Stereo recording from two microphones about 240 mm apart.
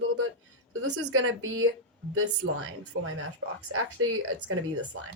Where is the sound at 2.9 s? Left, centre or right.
Right.